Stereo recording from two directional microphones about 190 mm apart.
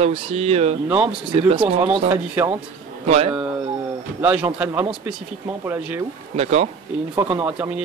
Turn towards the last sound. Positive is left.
turn(degrees=-5)  # may be behind; listen again after turning